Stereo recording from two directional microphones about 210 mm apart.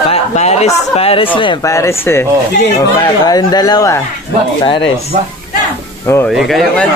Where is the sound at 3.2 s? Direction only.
20° left (ahead or behind).